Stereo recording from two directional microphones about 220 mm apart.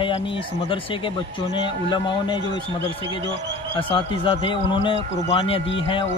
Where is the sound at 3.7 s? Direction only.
25° left (ahead or behind).